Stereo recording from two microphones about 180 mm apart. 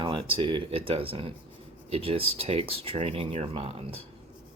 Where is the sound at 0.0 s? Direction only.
30° right (ahead or behind).